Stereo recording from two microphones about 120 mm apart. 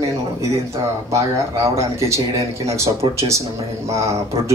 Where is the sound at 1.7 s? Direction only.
25° right (ahead or behind).